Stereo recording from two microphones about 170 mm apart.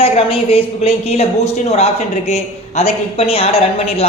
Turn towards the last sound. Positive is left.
turn(degrees=35)  # may be behind; listen again after turning